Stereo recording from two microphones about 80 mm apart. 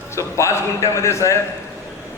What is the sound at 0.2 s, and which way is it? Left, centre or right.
A man's voice, left.